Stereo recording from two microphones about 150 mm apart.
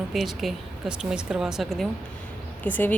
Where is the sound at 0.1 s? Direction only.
Centre (ahead or behind).